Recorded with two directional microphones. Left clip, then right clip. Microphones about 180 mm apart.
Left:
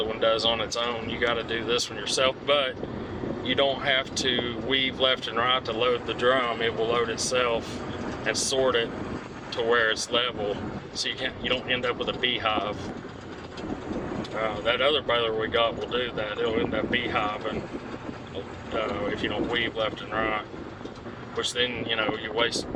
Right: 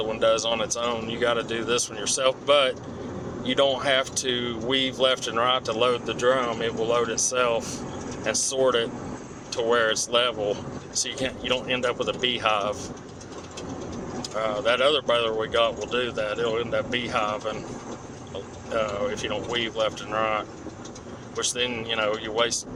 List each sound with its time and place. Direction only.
0.0 s speech: 15° right (ahead or behind)
6.2 s speech: 10° right (ahead or behind)
14.2 s speech: 20° right (ahead or behind)
18.7 s speech: 15° right (ahead or behind)